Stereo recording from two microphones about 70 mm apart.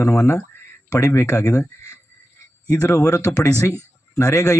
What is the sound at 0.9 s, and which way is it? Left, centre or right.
Speech, left.